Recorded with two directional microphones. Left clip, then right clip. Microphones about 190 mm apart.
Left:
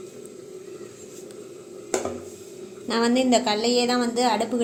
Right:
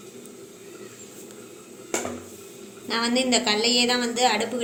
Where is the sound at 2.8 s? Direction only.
40° left (ahead or behind).